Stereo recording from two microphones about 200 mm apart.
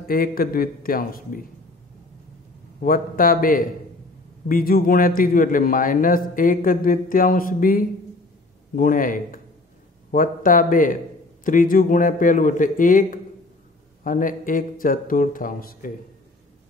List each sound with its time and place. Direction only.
0.1 s a man's voice: 45° left (ahead or behind)
2.8 s a man's voice: 45° left (ahead or behind)